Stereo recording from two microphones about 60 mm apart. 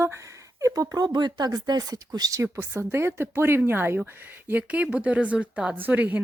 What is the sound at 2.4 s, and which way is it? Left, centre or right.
A woman's voice, right.